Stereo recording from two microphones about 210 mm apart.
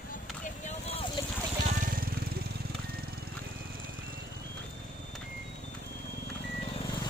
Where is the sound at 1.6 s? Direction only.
40° right (ahead or behind).